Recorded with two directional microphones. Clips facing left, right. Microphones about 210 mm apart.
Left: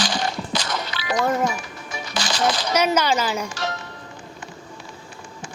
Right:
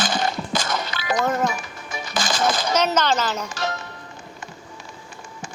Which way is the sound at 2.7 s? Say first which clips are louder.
Left 2 dB; 10° left (ahead or behind).